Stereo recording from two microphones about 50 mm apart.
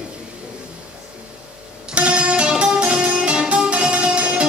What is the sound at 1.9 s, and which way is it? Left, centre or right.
Music, right.